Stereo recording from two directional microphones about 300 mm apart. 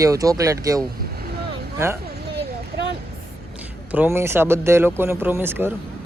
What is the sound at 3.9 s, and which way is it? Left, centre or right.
Speech, centre.